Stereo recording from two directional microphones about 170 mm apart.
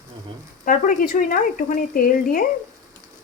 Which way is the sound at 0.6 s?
55° left (ahead or behind).